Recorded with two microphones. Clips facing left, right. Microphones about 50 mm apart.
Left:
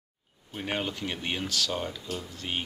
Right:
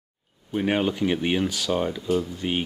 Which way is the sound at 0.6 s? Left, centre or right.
Centre.